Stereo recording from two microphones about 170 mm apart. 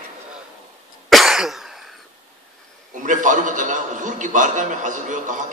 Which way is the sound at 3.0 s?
50° right (ahead or behind).